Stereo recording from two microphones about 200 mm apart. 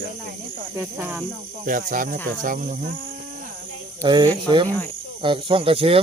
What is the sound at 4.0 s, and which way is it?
Speech, 25° right (ahead or behind).